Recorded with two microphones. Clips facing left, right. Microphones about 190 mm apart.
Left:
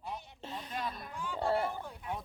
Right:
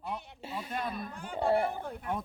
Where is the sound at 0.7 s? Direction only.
55° right (ahead or behind).